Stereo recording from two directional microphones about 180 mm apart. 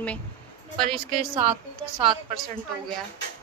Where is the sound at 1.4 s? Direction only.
30° right (ahead or behind).